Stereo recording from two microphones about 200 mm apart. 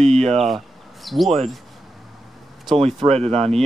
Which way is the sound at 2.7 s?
30° right (ahead or behind).